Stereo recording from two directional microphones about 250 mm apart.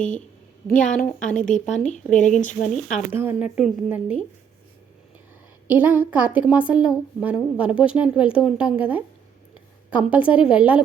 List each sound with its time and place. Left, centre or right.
0.9 s a woman's voice: centre
1.4 s speech: left
2.6 s a woman's voice: centre
5.6 s a woman's voice: centre